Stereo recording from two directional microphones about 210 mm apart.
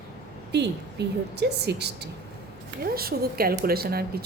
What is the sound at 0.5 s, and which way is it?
A woman's voice, 55° right (ahead or behind).